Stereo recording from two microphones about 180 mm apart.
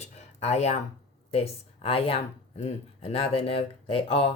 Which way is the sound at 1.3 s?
30° left (ahead or behind).